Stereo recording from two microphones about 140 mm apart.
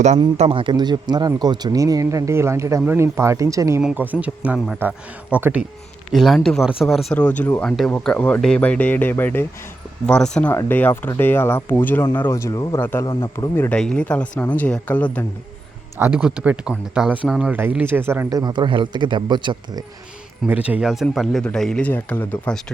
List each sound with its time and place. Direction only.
0.3 s speech: 40° right (ahead or behind); by 3.8 s 20° right (ahead or behind)
3.8 s speech: 10° right (ahead or behind); by 9.5 s 15° left (ahead or behind)
10.1 s speech: 5° left (ahead or behind)
16.0 s speech: 10° right (ahead or behind); by 19.8 s 35° right (ahead or behind)
20.5 s speech: 10° right (ahead or behind); by 22.6 s 10° left (ahead or behind)